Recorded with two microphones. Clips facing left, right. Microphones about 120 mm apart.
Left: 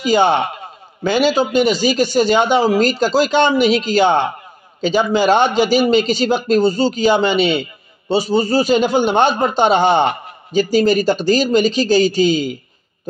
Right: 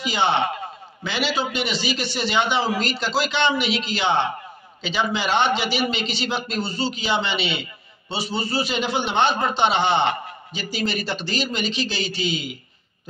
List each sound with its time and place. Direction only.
0.0 s a man's voice: 45° left (ahead or behind)